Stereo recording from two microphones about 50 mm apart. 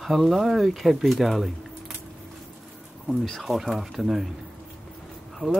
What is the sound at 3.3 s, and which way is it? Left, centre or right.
Speech, centre.